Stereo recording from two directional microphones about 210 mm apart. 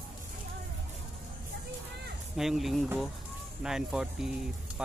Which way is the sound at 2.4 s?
Centre (ahead or behind).